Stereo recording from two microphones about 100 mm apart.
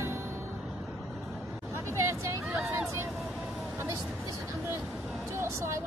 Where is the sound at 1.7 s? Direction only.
25° right (ahead or behind).